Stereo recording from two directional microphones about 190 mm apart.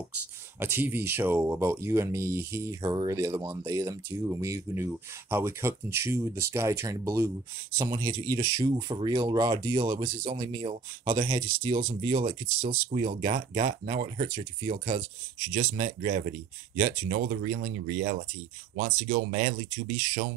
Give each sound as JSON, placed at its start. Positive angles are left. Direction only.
{"t": 0.6, "sound": "speech", "side_deg": -10}
{"t": 15.7, "sound": "speech", "side_deg": -50}